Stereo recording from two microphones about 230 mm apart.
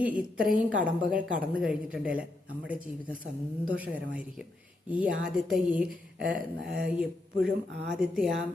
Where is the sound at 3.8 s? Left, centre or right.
Centre.